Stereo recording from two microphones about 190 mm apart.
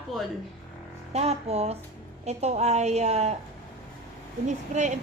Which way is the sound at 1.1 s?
35° right (ahead or behind).